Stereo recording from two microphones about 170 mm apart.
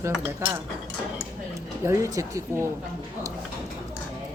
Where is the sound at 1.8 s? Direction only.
20° right (ahead or behind).